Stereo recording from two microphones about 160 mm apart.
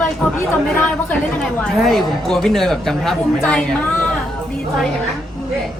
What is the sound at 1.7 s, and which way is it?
A woman's voice, centre (ahead or behind).